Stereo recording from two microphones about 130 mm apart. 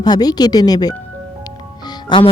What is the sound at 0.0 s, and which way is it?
Speech, 30° left (ahead or behind).